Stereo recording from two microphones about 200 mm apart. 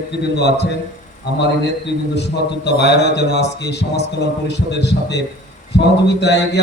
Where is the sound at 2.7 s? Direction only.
60° left (ahead or behind).